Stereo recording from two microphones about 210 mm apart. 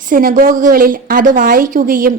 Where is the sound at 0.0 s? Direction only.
40° right (ahead or behind).